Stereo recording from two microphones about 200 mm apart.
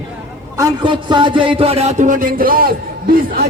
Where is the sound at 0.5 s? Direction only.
20° right (ahead or behind).